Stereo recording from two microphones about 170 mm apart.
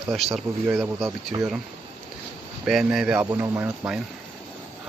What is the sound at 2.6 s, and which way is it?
Speech, 5° right (ahead or behind).